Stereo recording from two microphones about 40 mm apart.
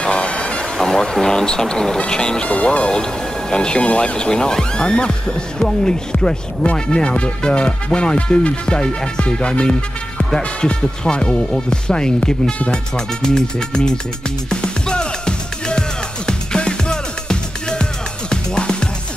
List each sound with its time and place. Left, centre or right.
0.0 s vehicle: left
0.7 s speech: centre
2.4 s speech: left
2.9 s speech: centre
14.5 s music: left